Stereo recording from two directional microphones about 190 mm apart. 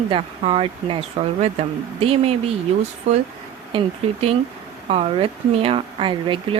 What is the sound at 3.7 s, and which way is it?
Speech, 25° right (ahead or behind).